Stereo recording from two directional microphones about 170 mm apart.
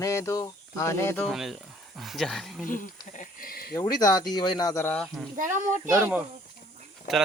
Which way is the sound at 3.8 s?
20° left (ahead or behind).